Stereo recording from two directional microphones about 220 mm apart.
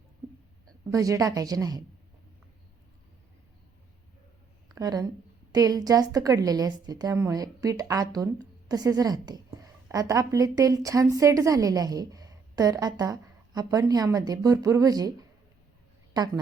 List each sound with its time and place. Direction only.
0.9 s a woman's voice: 15° right (ahead or behind)
4.7 s a woman's voice: 15° right (ahead or behind)
16.1 s a woman's voice: 20° right (ahead or behind)